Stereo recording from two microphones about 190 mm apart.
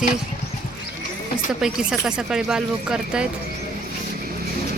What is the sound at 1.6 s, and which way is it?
Speech, 5° right (ahead or behind).